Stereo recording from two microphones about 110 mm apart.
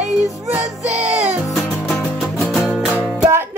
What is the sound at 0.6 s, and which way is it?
Music, 90° right.